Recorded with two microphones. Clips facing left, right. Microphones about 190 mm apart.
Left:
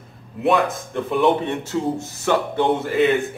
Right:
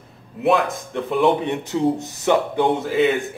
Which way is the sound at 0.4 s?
Centre (ahead or behind).